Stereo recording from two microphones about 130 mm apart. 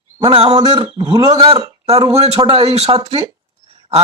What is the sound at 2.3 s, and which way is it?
Speech, 40° right (ahead or behind).